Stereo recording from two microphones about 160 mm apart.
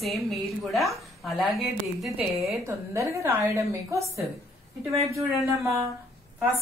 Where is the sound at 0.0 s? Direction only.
Centre (ahead or behind).